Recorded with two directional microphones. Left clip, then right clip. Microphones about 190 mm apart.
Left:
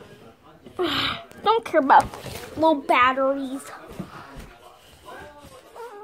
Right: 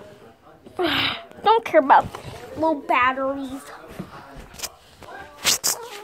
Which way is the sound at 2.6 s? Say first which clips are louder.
Left 1 dB; 15° left (ahead or behind).